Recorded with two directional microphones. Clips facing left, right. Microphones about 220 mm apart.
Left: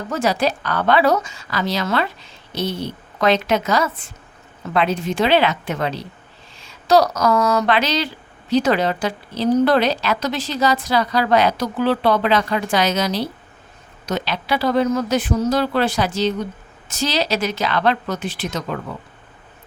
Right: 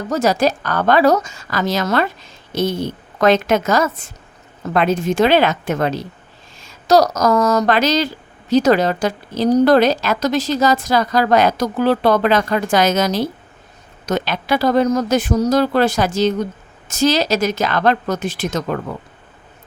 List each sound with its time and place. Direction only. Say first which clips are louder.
0.1 s speech: right 4 dB; 40° right (ahead or behind)